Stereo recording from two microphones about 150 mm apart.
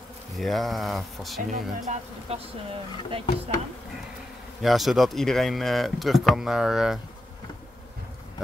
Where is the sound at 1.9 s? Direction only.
40° right (ahead or behind).